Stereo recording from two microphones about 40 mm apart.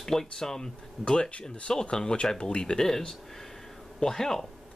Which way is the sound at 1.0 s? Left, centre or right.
Left.